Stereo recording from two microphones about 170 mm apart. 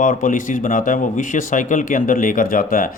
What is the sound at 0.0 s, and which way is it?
Speech, 50° left (ahead or behind).